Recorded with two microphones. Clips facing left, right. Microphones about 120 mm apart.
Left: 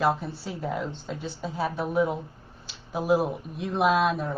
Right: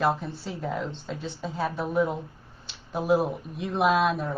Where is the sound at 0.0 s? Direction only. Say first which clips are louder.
Even; centre (ahead or behind).